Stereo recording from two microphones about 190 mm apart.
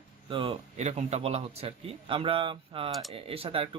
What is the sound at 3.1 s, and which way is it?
Speech, 30° right (ahead or behind).